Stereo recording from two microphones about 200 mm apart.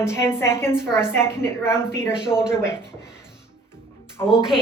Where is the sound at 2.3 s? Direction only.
5° right (ahead or behind).